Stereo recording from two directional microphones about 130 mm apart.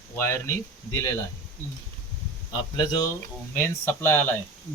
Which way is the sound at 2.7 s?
35° left (ahead or behind).